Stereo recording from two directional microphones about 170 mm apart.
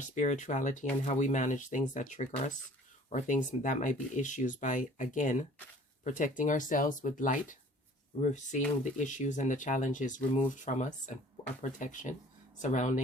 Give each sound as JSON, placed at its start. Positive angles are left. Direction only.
{"t": 0.0, "sound": "speech", "side_deg": 45}